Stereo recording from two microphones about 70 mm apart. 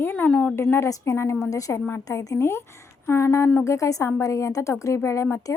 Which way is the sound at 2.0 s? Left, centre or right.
Left.